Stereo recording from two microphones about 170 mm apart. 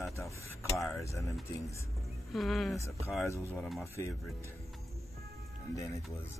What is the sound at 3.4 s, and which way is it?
Speech, 15° right (ahead or behind).